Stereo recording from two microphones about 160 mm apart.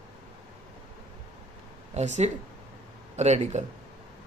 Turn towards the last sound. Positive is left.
turn(degrees=-45)  # may be behind; listen again after turning